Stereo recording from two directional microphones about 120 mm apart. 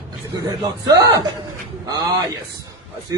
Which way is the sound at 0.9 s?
30° right (ahead or behind).